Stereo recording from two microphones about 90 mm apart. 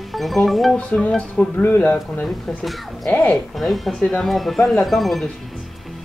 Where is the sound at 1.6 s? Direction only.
25° left (ahead or behind).